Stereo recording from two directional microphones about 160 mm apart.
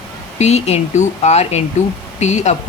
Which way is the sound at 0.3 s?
45° left (ahead or behind).